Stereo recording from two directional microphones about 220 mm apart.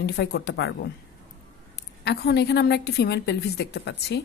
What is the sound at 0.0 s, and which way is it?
Speech, 50° left (ahead or behind).